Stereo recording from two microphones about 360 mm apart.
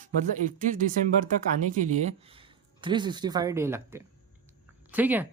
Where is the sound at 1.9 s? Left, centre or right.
Centre.